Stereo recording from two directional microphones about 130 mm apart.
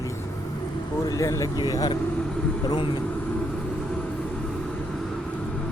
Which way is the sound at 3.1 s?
5° left (ahead or behind).